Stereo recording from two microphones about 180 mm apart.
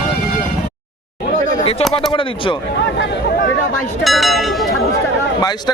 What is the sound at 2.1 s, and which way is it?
Speech, 30° left (ahead or behind).